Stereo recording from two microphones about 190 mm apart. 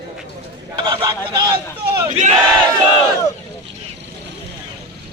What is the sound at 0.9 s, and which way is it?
Speech, 25° right (ahead or behind).